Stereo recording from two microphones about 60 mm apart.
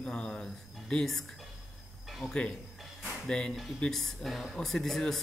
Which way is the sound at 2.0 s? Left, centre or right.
Centre.